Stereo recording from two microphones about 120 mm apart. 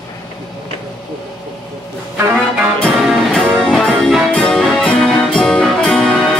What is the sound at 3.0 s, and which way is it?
Music, 5° right (ahead or behind).